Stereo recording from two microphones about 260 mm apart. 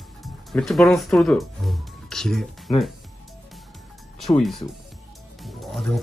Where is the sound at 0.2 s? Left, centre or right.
Centre.